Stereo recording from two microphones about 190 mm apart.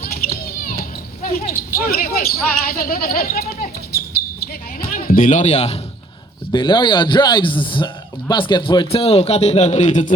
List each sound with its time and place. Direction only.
0.0 s children playing: 50° left (ahead or behind)
1.5 s speech: 50° left (ahead or behind)
4.8 s speech: 50° left (ahead or behind)
6.5 s a man's voice: 25° left (ahead or behind); by 10.2 s 40° left (ahead or behind)